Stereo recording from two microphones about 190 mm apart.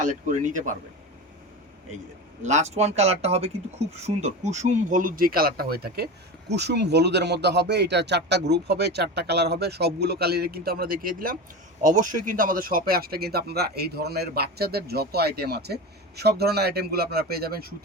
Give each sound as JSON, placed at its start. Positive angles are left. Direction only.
{"t": 0.0, "sound": "speech", "side_deg": -40}
{"t": 2.4, "sound": "speech", "side_deg": -35}